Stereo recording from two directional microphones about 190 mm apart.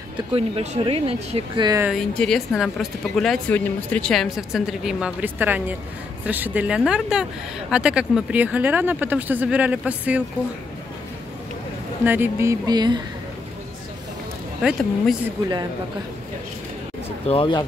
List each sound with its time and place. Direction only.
0.3 s speech: 30° right (ahead or behind)
1.9 s speech: centre (ahead or behind)
12.0 s speech: 10° right (ahead or behind)
14.6 s speech: centre (ahead or behind)
17.3 s speech: 25° left (ahead or behind)